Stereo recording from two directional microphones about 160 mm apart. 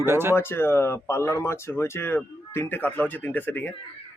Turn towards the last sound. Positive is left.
turn(degrees=10)  # may be behind; listen again after turning